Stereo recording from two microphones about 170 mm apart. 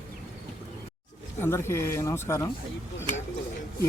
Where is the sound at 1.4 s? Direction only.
15° left (ahead or behind).